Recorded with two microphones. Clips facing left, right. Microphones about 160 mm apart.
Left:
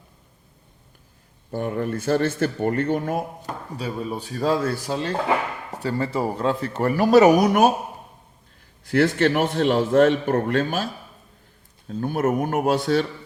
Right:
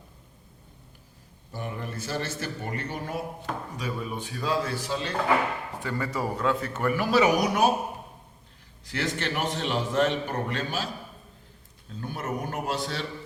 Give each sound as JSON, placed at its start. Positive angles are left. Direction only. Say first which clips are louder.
{"t": 1.5, "sound": "speech", "louder": "left 10 dB", "side_deg": 55}
{"t": 3.8, "sound": "speech", "louder": "left 8 dB", "side_deg": 30}
{"t": 5.8, "sound": "speech", "louder": "left 7 dB", "side_deg": 30}
{"t": 8.8, "sound": "speech", "louder": "left 12 dB", "side_deg": 55}
{"t": 11.9, "sound": "speech", "louder": "left 11 dB", "side_deg": 55}